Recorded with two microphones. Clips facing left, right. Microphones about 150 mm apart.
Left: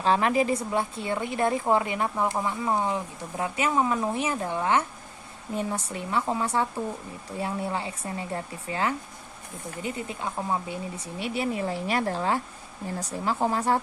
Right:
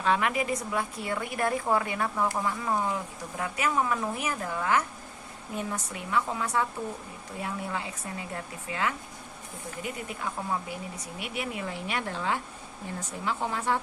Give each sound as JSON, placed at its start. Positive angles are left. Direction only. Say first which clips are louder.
{"t": 0.0, "sound": "a woman's voice", "louder": "left 4 dB", "side_deg": 30}